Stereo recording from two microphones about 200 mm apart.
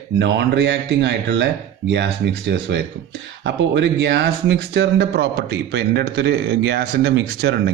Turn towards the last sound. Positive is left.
turn(degrees=-55)  # may be behind; listen again after turning